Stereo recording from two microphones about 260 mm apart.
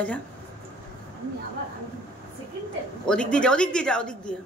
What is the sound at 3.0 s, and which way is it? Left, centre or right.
Speech, centre.